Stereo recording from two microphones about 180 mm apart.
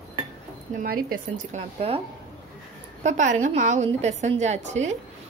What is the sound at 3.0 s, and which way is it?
A woman's voice, 40° right (ahead or behind).